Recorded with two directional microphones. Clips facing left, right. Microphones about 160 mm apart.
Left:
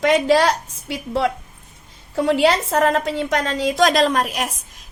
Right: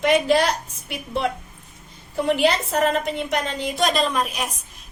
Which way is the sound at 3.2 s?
90° left.